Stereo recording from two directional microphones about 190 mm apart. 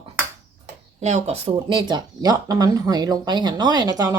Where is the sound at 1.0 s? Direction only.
35° right (ahead or behind).